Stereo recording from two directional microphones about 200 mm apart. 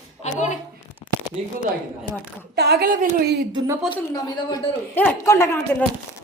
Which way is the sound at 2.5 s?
55° right (ahead or behind).